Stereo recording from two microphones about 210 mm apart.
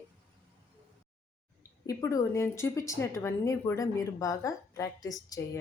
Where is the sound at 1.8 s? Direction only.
15° left (ahead or behind).